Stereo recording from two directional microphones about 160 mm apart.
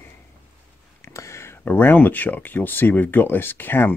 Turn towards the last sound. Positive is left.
turn(degrees=15)  # may be behind; listen again after turning